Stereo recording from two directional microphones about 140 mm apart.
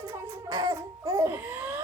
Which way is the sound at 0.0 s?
20° right (ahead or behind).